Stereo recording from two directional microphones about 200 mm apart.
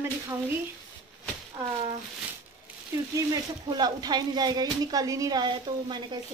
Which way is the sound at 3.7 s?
20° right (ahead or behind).